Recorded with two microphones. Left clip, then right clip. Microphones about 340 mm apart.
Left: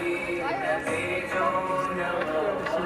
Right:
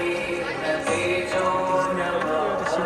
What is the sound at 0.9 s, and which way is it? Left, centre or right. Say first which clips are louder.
Music: right 5 dB; right.